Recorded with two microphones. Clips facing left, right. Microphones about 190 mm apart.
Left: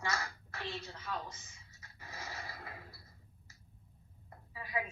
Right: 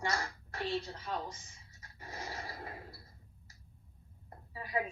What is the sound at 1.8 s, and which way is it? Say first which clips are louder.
Pant: right 4 dB; 35° right (ahead or behind).